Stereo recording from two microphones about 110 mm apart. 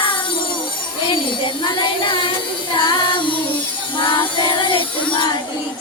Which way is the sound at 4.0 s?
45° left (ahead or behind).